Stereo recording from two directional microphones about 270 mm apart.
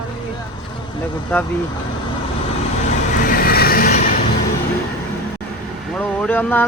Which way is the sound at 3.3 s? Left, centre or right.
Left.